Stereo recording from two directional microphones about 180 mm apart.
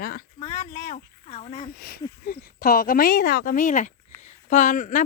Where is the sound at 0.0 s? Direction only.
55° left (ahead or behind).